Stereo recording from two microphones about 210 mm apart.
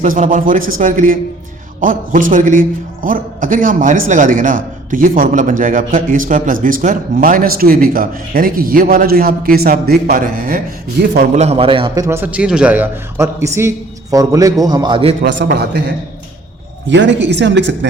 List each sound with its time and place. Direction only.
0.0 s a man's voice: 40° right (ahead or behind)
11.3 s a man's voice: 30° right (ahead or behind)
12.0 s a man's voice: 10° right (ahead or behind)
15.2 s a man's voice: 55° right (ahead or behind)
16.9 s speech: 60° right (ahead or behind)